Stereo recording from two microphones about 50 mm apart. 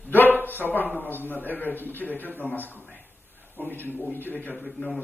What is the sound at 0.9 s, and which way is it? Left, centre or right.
Speech, left.